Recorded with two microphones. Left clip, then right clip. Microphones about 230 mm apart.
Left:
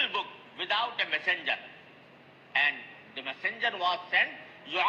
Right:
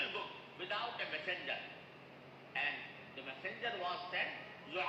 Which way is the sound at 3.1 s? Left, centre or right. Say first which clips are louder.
Left 12 dB; left.